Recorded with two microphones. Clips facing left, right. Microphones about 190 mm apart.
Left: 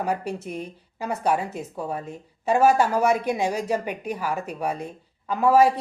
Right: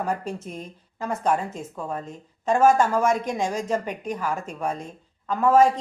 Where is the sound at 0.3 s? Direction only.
65° left (ahead or behind).